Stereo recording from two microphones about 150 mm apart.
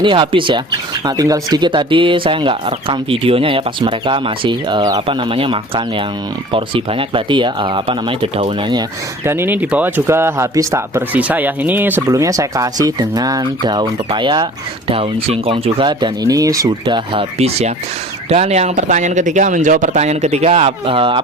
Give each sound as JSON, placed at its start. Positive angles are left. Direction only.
{"t": 0.0, "sound": "speech", "side_deg": -30}
{"t": 1.0, "sound": "speech", "side_deg": -25}
{"t": 9.2, "sound": "speech", "side_deg": -15}
{"t": 17.3, "sound": "speech", "side_deg": -45}